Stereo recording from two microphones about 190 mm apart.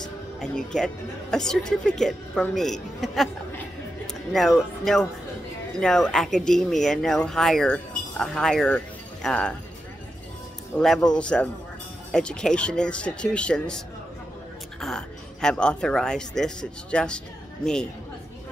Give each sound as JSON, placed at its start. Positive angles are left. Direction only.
{"t": 0.4, "sound": "speech", "side_deg": 5}
{"t": 10.8, "sound": "speech", "side_deg": 0}